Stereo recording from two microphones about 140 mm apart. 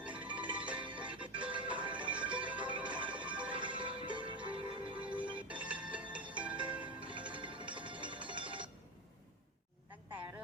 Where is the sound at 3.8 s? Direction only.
35° right (ahead or behind).